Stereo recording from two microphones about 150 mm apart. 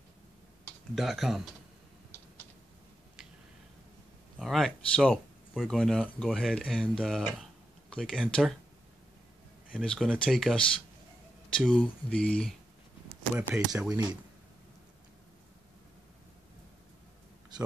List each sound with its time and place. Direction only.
0.9 s speech: centre (ahead or behind)
4.4 s speech: centre (ahead or behind)
9.8 s speech: 5° left (ahead or behind)
13.3 s speech: 20° right (ahead or behind)
17.5 s a sound: 30° right (ahead or behind)